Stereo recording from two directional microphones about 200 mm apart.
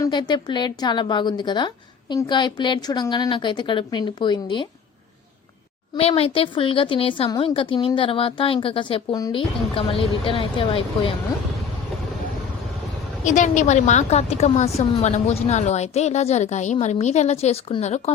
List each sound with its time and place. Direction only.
0.0 s a woman's voice: 20° left (ahead or behind)
6.0 s a woman's voice: 30° left (ahead or behind)
13.2 s a woman's voice: 40° left (ahead or behind)